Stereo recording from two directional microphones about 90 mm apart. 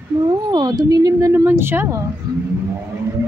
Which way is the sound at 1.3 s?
25° right (ahead or behind).